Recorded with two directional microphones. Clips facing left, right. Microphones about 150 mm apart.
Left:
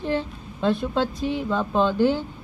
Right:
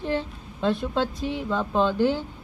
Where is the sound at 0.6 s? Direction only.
55° left (ahead or behind).